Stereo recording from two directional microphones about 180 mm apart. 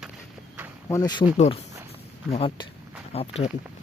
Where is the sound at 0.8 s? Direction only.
20° left (ahead or behind).